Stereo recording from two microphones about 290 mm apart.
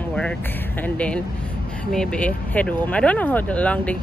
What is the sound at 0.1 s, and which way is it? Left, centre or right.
Speech, centre.